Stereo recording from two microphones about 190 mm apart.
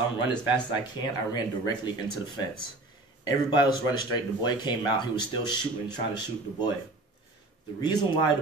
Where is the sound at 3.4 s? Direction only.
20° left (ahead or behind).